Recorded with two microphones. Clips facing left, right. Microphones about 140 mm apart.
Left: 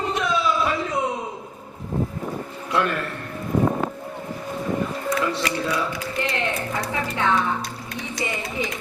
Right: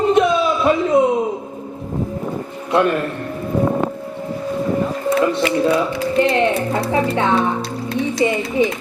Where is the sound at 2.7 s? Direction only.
20° right (ahead or behind).